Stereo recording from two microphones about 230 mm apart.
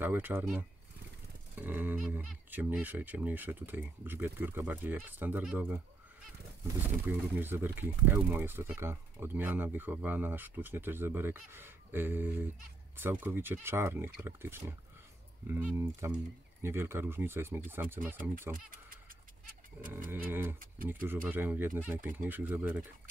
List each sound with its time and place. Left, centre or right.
0.0 s speech: centre
7.3 s speech: centre
18.5 s fowl: right
20.1 s speech: centre